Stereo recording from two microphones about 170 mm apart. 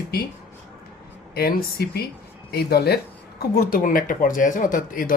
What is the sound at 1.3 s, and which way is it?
Speech, 65° left (ahead or behind).